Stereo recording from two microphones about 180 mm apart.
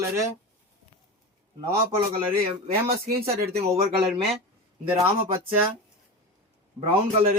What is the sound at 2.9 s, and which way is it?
Speech, 55° right (ahead or behind).